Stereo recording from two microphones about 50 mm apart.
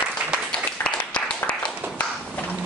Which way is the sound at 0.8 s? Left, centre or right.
Left.